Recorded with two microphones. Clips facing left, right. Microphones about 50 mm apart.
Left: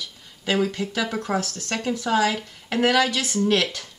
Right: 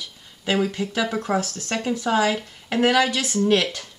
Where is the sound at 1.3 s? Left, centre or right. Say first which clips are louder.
Right 2 dB; centre.